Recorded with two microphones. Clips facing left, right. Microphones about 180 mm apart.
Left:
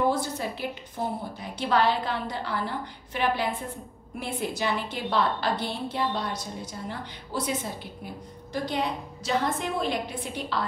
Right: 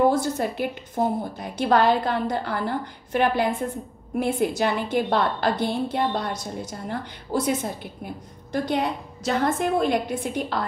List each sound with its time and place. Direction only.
0.1 s a woman's voice: 50° right (ahead or behind)